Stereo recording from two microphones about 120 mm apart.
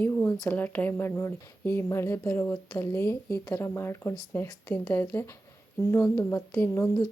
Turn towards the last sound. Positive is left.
turn(degrees=20)  # may be behind; listen again after turning